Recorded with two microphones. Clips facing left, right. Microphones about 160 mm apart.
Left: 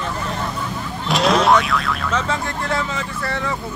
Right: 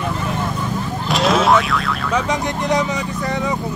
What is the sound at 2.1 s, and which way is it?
Speech, 15° right (ahead or behind).